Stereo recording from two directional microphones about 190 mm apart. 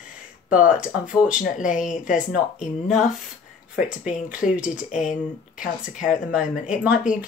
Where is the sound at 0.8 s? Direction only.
5° right (ahead or behind).